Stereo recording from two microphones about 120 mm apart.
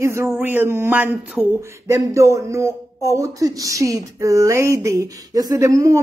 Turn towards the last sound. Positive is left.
turn(degrees=-25)  # may be behind; listen again after turning